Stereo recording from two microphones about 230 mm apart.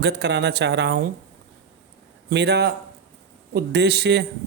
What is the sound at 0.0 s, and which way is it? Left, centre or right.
Speech, right.